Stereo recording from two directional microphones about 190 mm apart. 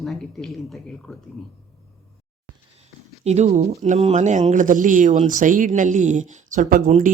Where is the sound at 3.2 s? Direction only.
35° right (ahead or behind).